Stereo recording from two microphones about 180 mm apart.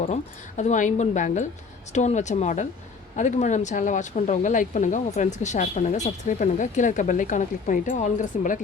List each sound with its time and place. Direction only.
0.0 s speech: 40° left (ahead or behind)